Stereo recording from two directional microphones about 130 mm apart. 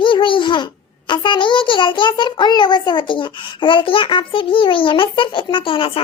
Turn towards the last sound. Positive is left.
turn(degrees=45)  # may be behind; listen again after turning